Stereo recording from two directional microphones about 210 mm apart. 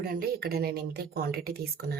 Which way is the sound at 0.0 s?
45° right (ahead or behind).